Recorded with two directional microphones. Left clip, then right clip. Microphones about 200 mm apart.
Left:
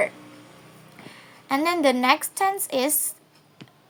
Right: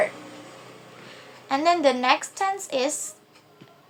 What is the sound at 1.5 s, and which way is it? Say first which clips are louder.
Speech: right 1 dB; 30° left (ahead or behind).